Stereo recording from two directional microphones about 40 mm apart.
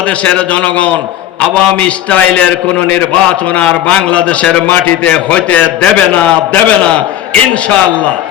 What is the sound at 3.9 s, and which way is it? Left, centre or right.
Speech, centre.